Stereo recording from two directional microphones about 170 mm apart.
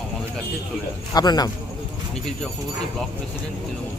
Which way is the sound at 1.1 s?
25° left (ahead or behind).